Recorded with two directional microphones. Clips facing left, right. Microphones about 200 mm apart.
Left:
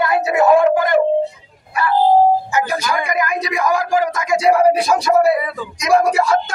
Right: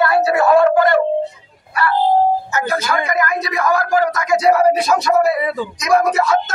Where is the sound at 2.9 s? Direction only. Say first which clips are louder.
Right 1 dB; 15° left (ahead or behind).